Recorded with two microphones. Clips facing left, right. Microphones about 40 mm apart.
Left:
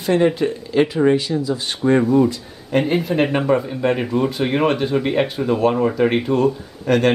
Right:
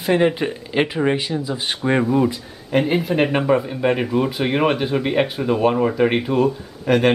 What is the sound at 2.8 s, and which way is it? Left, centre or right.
Speech, centre.